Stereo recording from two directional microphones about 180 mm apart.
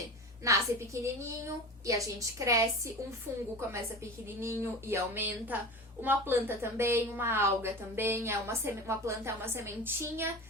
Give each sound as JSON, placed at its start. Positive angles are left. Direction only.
{"t": 0.4, "sound": "a woman's voice", "side_deg": -15}